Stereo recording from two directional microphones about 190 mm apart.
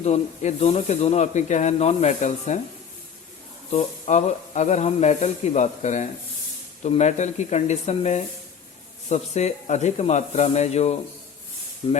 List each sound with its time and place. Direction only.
0.0 s speech: 35° left (ahead or behind)
3.7 s speech: 35° left (ahead or behind)